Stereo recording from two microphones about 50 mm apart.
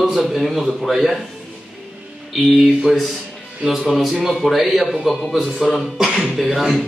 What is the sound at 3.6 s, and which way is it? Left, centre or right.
A man's voice, centre.